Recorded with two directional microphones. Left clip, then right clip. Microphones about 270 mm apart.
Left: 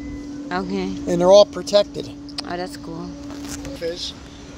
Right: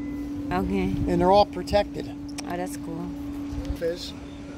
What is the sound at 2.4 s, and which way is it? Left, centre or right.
Speech, centre.